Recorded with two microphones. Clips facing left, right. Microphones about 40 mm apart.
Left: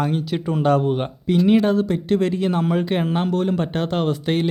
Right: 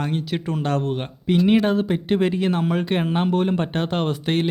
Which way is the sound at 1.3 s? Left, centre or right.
Centre.